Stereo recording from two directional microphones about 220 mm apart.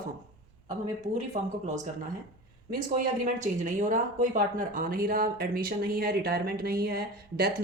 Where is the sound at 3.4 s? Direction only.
35° right (ahead or behind).